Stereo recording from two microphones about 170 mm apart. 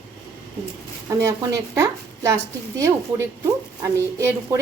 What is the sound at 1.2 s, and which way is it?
A woman's voice, 15° right (ahead or behind).